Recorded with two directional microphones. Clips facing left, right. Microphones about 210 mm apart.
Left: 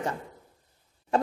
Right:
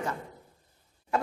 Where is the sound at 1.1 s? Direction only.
30° left (ahead or behind).